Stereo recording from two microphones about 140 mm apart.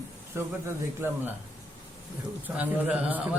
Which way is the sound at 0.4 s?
20° right (ahead or behind).